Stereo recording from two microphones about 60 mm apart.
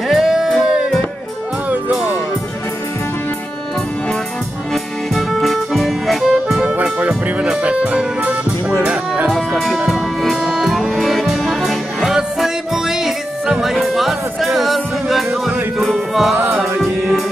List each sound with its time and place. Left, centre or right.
0.1 s music: centre
5.1 s music: centre
6.8 s music: right
9.5 s music: centre